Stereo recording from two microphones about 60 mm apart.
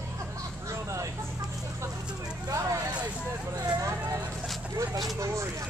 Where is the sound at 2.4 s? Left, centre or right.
Right.